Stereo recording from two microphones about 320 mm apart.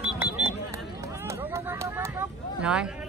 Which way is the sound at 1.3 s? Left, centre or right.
Centre.